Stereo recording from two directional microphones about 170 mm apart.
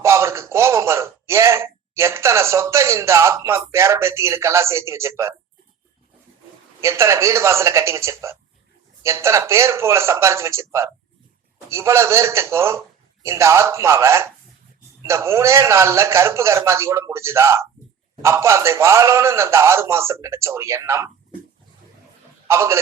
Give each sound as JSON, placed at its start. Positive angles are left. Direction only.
{"t": 0.0, "sound": "speech", "side_deg": -15}
{"t": 6.8, "sound": "a man's voice", "side_deg": -15}
{"t": 22.4, "sound": "a man's voice", "side_deg": -15}